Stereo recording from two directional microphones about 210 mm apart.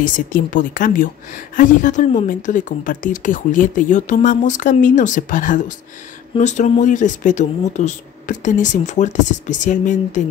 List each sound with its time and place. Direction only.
0.0 s speech: 40° left (ahead or behind)